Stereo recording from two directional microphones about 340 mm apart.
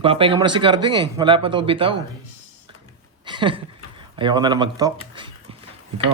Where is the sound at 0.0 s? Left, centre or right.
Centre.